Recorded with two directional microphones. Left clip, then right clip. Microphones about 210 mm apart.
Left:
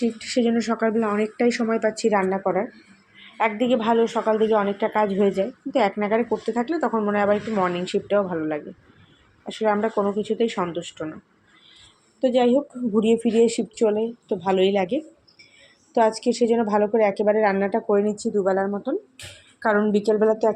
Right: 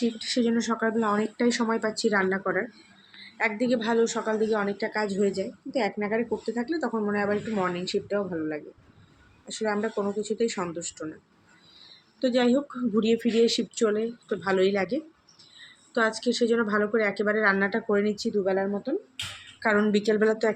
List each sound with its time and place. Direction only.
0.0 s a woman's voice: 20° left (ahead or behind)
12.2 s speech: centre (ahead or behind)
16.0 s a woman's voice: 10° left (ahead or behind)
16.5 s a woman's voice: 35° right (ahead or behind)
16.7 s a woman's voice: 10° left (ahead or behind)